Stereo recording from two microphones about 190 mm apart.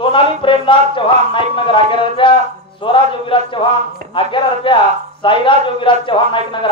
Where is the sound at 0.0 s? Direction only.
25° left (ahead or behind).